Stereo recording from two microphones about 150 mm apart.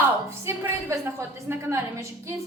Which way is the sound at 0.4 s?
15° right (ahead or behind).